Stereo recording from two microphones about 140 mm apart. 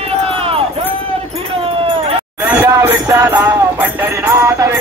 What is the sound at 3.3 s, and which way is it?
Music, 15° right (ahead or behind).